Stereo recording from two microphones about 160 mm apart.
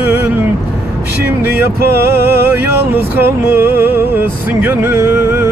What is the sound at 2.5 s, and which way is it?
Music, 15° right (ahead or behind).